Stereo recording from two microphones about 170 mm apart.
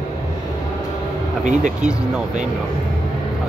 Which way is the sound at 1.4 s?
45° right (ahead or behind).